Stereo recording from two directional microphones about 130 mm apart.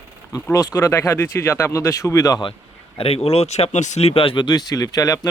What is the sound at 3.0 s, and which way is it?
Speech, 50° left (ahead or behind).